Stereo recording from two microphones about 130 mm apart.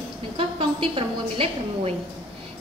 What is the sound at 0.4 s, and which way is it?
A woman's voice, 45° right (ahead or behind).